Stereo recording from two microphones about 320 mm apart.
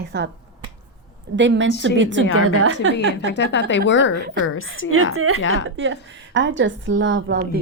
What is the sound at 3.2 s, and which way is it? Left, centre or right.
Speech, left.